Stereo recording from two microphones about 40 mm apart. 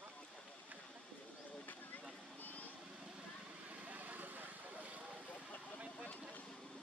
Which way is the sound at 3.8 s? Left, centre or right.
Right.